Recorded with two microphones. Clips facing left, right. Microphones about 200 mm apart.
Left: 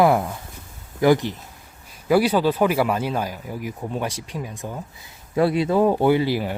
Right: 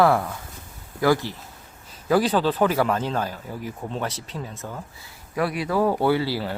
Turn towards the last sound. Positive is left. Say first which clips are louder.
# left 3 dB
turn(degrees=15)  # may be behind; listen again after turning